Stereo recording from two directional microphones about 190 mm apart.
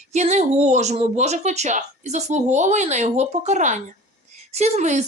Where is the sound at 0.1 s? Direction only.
35° right (ahead or behind).